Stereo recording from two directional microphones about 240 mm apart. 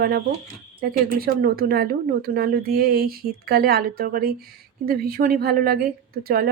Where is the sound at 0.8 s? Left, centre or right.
Right.